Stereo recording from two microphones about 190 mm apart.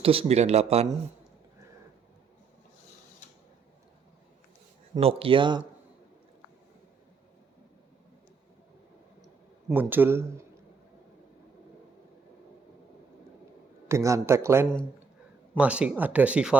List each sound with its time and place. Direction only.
0.0 s speech: 30° right (ahead or behind)
4.9 s speech: 30° right (ahead or behind)
9.7 s speech: 10° right (ahead or behind)
13.8 s speech: 15° right (ahead or behind)